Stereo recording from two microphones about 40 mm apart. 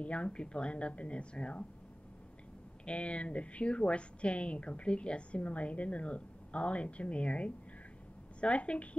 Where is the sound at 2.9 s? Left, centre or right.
Left.